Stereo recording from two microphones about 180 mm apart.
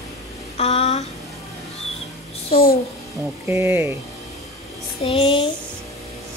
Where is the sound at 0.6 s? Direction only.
35° left (ahead or behind).